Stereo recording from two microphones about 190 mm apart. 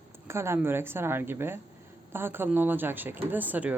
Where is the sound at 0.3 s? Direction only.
15° right (ahead or behind).